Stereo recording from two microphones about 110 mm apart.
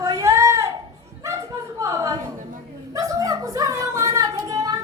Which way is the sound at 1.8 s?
30° right (ahead or behind).